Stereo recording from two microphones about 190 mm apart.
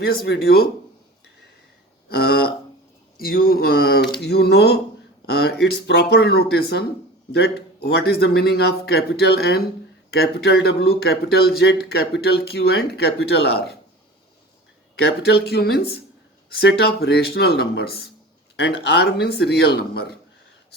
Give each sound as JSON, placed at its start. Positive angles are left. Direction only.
{"t": 0.0, "sound": "speech", "side_deg": 60}
{"t": 2.0, "sound": "a sound", "side_deg": 55}
{"t": 3.2, "sound": "speech", "side_deg": 55}
{"t": 5.2, "sound": "a sound", "side_deg": 60}
{"t": 6.1, "sound": "speech", "side_deg": 60}
{"t": 15.2, "sound": "speech", "side_deg": 55}